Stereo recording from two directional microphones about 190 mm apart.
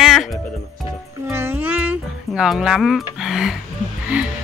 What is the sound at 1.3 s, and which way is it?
Music, 10° right (ahead or behind).